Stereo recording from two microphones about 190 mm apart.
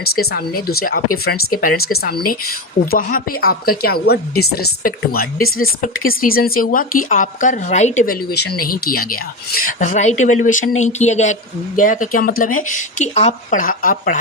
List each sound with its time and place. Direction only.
0.0 s speech: 55° left (ahead or behind)